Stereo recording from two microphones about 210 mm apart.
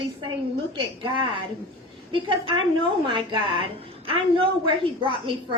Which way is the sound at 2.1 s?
25° right (ahead or behind).